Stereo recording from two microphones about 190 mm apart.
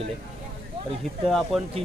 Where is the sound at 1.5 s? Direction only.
Centre (ahead or behind).